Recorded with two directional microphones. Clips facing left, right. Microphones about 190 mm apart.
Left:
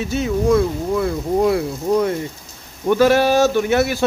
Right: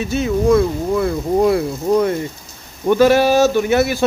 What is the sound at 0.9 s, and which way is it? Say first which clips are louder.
Speech: right 2 dB; 45° right (ahead or behind).